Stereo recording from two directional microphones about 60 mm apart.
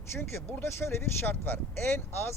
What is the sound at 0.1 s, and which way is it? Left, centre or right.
Speech, left.